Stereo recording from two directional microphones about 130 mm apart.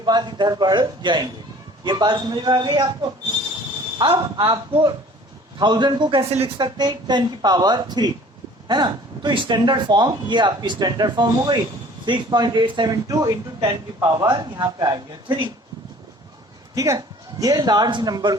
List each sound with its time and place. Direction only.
0.0 s speech: 35° right (ahead or behind)
6.6 s speech: 35° right (ahead or behind)
16.7 s speech: 25° right (ahead or behind)